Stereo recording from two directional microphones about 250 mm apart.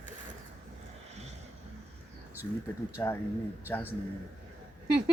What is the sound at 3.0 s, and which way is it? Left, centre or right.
Speech, centre.